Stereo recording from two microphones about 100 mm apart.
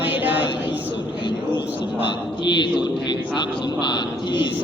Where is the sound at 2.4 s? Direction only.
50° left (ahead or behind).